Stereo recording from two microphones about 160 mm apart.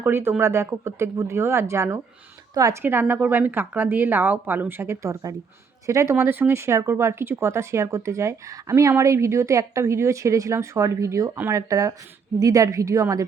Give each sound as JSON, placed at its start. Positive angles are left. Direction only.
{"t": 0.0, "sound": "a woman's voice", "side_deg": -15}